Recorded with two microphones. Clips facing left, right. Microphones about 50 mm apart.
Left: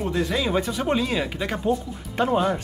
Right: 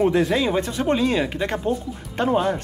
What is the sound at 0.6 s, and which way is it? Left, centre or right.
Speech, centre.